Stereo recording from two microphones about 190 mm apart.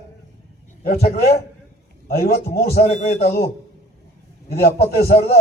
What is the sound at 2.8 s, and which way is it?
Speech, 35° left (ahead or behind).